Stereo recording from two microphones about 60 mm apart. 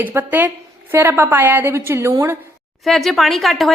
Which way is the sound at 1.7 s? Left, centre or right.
Right.